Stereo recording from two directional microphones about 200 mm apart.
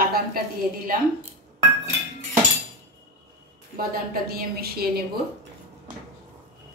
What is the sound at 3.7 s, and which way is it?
A woman's voice, 45° right (ahead or behind).